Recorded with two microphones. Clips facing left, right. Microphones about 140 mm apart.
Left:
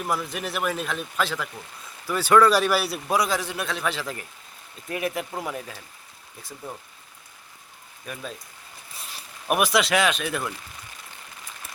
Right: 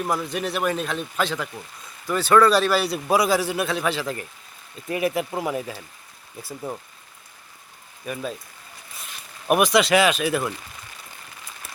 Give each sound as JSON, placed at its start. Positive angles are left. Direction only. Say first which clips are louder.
{"t": 0.0, "sound": "a man's voice", "louder": "right 3 dB", "side_deg": 0}
{"t": 8.0, "sound": "a man's voice", "louder": "right 6 dB", "side_deg": -5}
{"t": 9.5, "sound": "a man's voice", "louder": "right 4 dB", "side_deg": 0}